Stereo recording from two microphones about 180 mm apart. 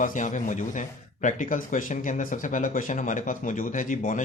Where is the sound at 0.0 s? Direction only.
45° left (ahead or behind).